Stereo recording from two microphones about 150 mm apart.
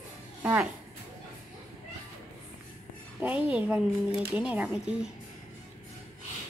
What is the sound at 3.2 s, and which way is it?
A woman's voice, 10° right (ahead or behind).